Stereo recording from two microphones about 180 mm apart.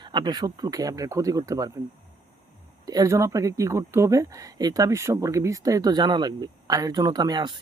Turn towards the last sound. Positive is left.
turn(degrees=-25)  # may be behind; listen again after turning